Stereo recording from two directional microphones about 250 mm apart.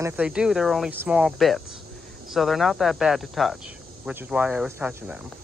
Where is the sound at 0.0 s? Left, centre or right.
Centre.